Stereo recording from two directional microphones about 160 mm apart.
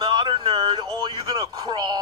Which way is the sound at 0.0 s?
30° right (ahead or behind).